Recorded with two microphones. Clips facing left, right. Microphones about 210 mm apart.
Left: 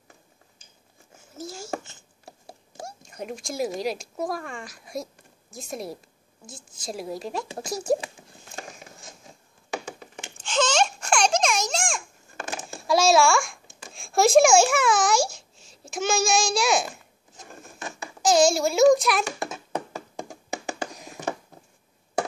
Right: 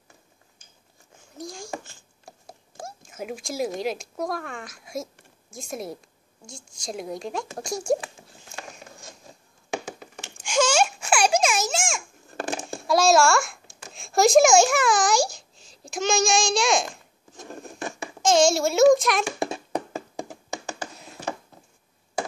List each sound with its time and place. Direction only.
1.3 s a sound: 5° left (ahead or behind)
3.1 s a woman's voice: 5° right (ahead or behind)
10.3 s babbling: 10° right (ahead or behind)
12.4 s a sound: 30° right (ahead or behind)
12.8 s a child's voice: centre (ahead or behind)
15.2 s a sound: 35° right (ahead or behind)
15.9 s a woman's voice: 5° left (ahead or behind)
18.2 s a woman's voice: centre (ahead or behind)
20.4 s hands: 15° left (ahead or behind)